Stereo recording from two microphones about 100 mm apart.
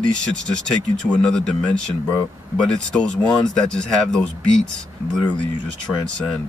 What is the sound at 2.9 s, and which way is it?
Speech, 5° left (ahead or behind).